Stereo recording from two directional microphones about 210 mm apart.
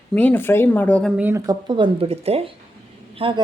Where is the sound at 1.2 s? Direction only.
10° right (ahead or behind).